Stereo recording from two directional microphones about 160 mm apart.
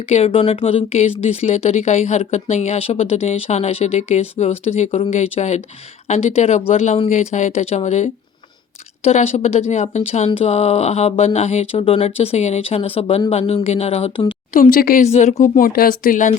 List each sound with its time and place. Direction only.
0.1 s speech: 35° left (ahead or behind)
14.5 s speech: 60° left (ahead or behind)
15.0 s speech: 45° left (ahead or behind)